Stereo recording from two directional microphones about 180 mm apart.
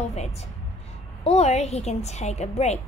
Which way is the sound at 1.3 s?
35° left (ahead or behind).